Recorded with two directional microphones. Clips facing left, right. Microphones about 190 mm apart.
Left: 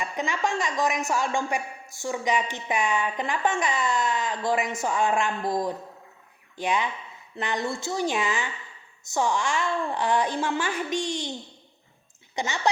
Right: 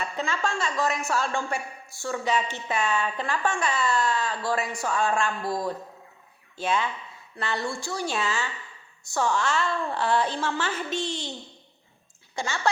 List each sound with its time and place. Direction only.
0.0 s a woman's voice: 15° left (ahead or behind)
12.3 s speech: 20° left (ahead or behind)